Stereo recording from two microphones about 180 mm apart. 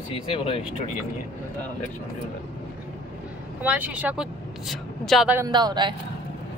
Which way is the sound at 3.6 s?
10° right (ahead or behind).